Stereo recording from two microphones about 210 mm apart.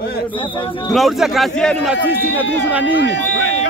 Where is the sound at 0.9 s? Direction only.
Centre (ahead or behind).